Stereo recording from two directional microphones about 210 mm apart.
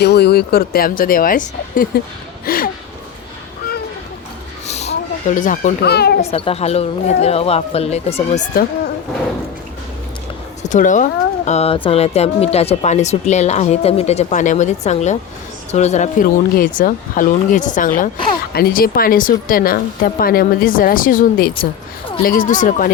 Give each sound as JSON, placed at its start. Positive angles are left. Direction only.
{"t": 0.0, "sound": "speech", "side_deg": 50}
{"t": 4.6, "sound": "a sound", "side_deg": 30}
{"t": 6.2, "sound": "speech", "side_deg": 30}
{"t": 10.6, "sound": "speech", "side_deg": 35}
{"t": 21.5, "sound": "speech", "side_deg": 25}
{"t": 22.2, "sound": "speech", "side_deg": 40}